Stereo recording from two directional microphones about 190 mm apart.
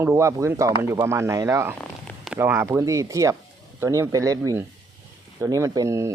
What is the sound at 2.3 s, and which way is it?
Speech, 10° right (ahead or behind).